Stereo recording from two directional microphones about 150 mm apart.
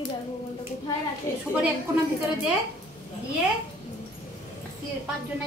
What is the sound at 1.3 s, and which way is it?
Speech, 20° left (ahead or behind).